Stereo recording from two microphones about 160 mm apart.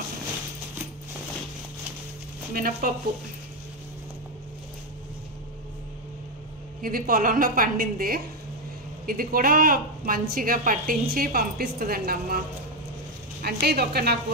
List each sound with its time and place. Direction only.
2.5 s a woman's voice: 65° right (ahead or behind)
6.8 s a woman's voice: 65° right (ahead or behind); by 14.1 s 80° right